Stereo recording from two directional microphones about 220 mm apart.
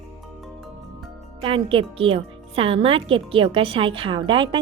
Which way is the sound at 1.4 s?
25° right (ahead or behind).